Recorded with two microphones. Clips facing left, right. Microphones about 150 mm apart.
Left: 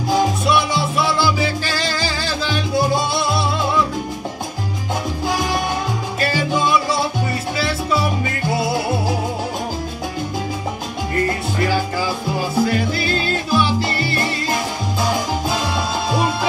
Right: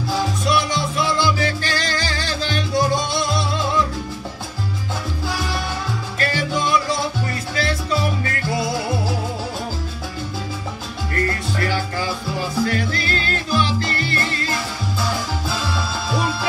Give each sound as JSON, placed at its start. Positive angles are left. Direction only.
{"t": 0.7, "sound": "music", "side_deg": 10}
{"t": 5.3, "sound": "salsa music", "side_deg": 15}
{"t": 7.9, "sound": "music", "side_deg": 15}
{"t": 11.1, "sound": "music", "side_deg": 15}